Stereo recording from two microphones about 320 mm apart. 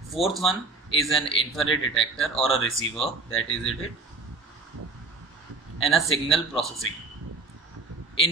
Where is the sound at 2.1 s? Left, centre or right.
Centre.